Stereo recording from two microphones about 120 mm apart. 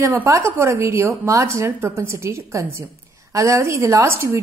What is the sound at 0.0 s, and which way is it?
A woman's voice, 25° right (ahead or behind).